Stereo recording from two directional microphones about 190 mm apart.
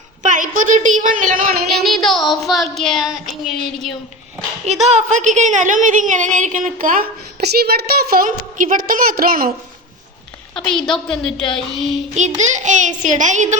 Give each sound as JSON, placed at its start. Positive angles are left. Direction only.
{"t": 0.2, "sound": "a woman's voice", "side_deg": -45}
{"t": 1.6, "sound": "child singing", "side_deg": 0}
{"t": 4.6, "sound": "a woman's voice", "side_deg": -35}
{"t": 10.6, "sound": "child singing", "side_deg": 5}
{"t": 12.1, "sound": "a sound", "side_deg": -40}